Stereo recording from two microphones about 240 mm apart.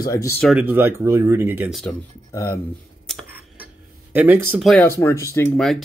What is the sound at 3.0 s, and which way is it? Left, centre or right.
Speech, centre.